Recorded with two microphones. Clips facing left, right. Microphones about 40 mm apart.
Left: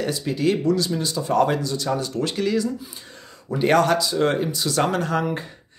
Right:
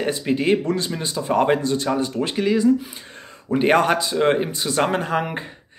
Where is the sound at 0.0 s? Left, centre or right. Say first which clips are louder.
Right 1 dB; right.